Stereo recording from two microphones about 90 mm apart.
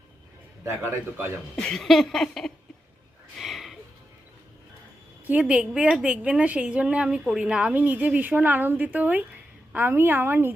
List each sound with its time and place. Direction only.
0.6 s a woman's voice: 30° right (ahead or behind)
1.5 s a sound: 5° left (ahead or behind)
5.2 s a woman's voice: 15° right (ahead or behind)